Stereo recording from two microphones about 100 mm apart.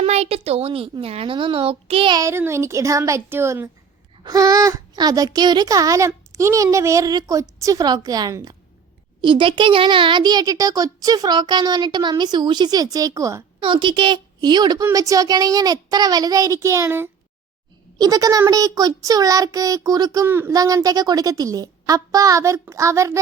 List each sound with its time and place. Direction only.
0.0 s a woman's voice: 90° right; by 2.1 s 65° right (ahead or behind)
2.1 s a child's voice: 25° right (ahead or behind)
4.2 s a child's voice: 40° right (ahead or behind)
9.2 s a child's voice: 55° right (ahead or behind); by 13.4 s 35° right (ahead or behind)
13.6 s a woman's voice: 55° right (ahead or behind); by 17.1 s 25° right (ahead or behind)
17.9 s a child's voice: 40° right (ahead or behind)
20.2 s a child's voice: 25° right (ahead or behind)
20.5 s a child's voice: 40° right (ahead or behind)